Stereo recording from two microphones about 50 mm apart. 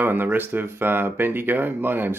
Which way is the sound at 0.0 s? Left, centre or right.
Right.